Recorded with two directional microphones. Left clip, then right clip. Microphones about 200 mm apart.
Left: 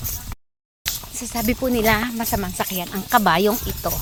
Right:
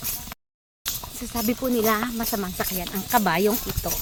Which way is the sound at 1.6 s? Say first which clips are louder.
Left 4 dB; 15° left (ahead or behind).